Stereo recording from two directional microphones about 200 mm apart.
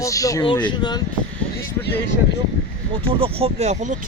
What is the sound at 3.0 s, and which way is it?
Speech, 30° right (ahead or behind).